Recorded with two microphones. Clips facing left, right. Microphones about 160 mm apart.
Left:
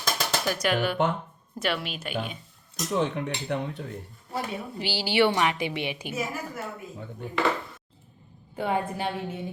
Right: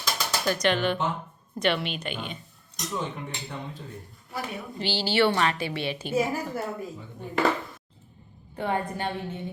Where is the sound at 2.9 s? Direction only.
75° left (ahead or behind).